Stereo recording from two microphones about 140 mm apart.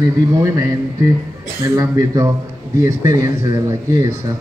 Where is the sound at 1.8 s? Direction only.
20° right (ahead or behind).